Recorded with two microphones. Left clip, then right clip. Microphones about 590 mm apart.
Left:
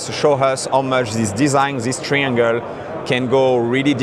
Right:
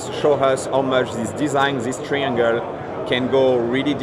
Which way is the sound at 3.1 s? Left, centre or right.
Left.